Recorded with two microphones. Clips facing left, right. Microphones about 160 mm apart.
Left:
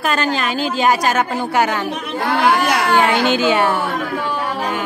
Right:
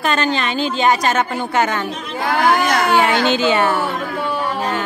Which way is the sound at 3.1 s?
10° left (ahead or behind).